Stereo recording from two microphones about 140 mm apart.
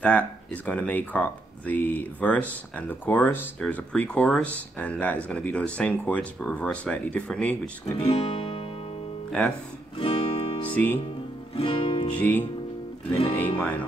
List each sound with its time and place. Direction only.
0.0 s speech: 10° left (ahead or behind)
7.8 s music: 45° left (ahead or behind)
9.9 s music: 45° left (ahead or behind)
10.7 s speech: 10° left (ahead or behind)
11.5 s music: 40° left (ahead or behind)
12.2 s speech: 10° left (ahead or behind)
13.6 s speech: 10° left (ahead or behind)